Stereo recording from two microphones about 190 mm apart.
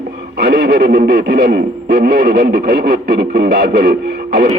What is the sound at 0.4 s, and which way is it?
Speech, 60° right (ahead or behind).